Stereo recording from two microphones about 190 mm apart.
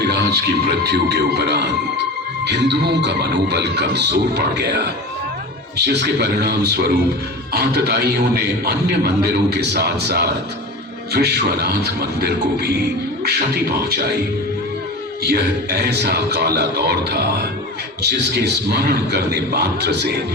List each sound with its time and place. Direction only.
0.0 s a sound: 60° right (ahead or behind)
0.9 s a man's voice: 60° right (ahead or behind)
15.2 s a man's voice: 60° right (ahead or behind)